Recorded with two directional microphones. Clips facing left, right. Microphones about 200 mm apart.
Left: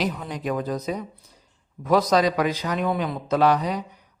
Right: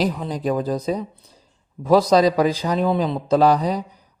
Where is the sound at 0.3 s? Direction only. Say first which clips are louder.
Right 5 dB; 35° right (ahead or behind).